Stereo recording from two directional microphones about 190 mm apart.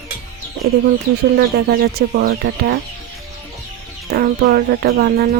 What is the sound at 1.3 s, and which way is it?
Speech, 55° right (ahead or behind).